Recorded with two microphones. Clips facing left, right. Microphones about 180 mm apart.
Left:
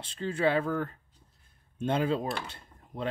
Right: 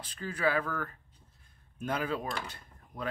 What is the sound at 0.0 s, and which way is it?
Speech, 25° left (ahead or behind).